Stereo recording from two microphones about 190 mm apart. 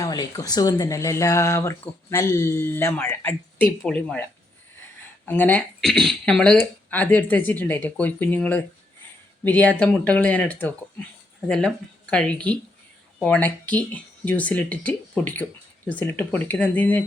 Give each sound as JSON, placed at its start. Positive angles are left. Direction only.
{"t": 0.0, "sound": "speech", "side_deg": 20}